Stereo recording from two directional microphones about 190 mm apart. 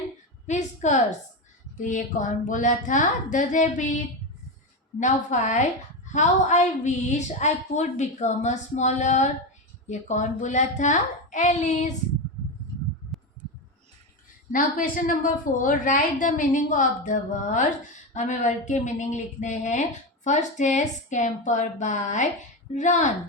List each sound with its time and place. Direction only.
0.4 s a woman's voice: 40° left (ahead or behind)
14.5 s a woman's voice: 45° left (ahead or behind)